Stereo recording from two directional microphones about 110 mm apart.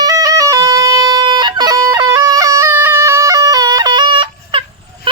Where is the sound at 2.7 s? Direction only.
20° right (ahead or behind); by 4.6 s 45° right (ahead or behind).